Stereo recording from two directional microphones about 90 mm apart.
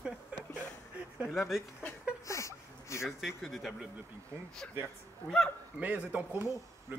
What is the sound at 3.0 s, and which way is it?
Speech, centre (ahead or behind).